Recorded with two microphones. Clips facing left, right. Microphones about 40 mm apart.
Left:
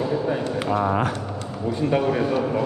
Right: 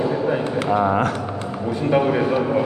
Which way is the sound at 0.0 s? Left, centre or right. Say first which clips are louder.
Right 3 dB; right.